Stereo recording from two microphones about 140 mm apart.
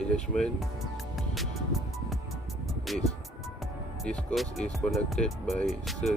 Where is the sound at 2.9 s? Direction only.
Centre (ahead or behind).